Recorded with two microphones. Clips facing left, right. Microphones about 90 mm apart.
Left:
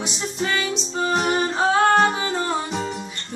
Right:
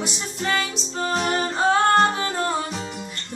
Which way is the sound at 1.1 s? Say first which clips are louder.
Left 2 dB; 10° left (ahead or behind).